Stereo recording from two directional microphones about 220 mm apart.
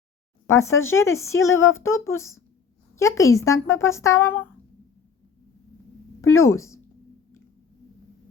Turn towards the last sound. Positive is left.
turn(degrees=15)  # may be behind; listen again after turning